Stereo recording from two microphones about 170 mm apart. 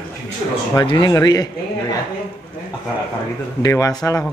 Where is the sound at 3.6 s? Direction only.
20° left (ahead or behind).